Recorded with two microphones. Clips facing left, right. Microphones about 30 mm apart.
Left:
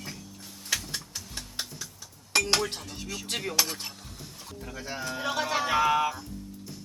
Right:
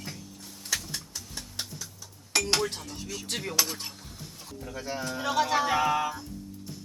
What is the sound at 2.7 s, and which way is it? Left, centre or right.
Speech, left.